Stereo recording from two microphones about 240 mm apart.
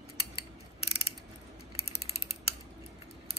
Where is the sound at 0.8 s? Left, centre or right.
Left.